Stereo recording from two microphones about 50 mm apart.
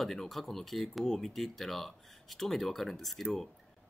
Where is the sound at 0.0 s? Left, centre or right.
Centre.